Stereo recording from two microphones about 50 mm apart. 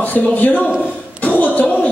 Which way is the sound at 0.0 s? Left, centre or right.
Left.